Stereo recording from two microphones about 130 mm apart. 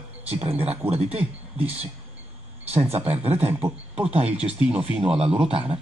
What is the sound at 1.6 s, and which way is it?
Speech, 10° right (ahead or behind).